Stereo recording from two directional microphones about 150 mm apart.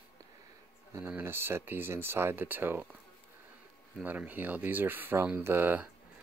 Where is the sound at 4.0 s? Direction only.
10° right (ahead or behind).